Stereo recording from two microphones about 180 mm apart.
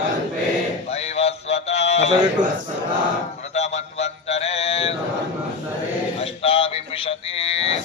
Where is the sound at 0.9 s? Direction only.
35° left (ahead or behind).